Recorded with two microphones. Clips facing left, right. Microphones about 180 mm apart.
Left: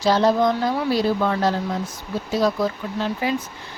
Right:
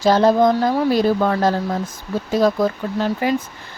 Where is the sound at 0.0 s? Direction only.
50° right (ahead or behind).